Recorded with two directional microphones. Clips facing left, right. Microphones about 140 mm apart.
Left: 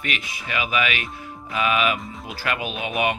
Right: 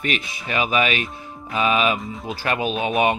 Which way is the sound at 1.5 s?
30° right (ahead or behind).